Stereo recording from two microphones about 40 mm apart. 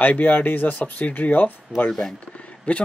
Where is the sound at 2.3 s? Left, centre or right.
Left.